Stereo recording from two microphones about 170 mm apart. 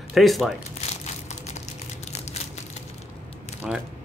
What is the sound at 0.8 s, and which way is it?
Crushing, 40° left (ahead or behind).